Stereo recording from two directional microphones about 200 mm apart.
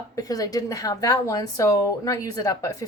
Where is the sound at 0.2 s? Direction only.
20° left (ahead or behind).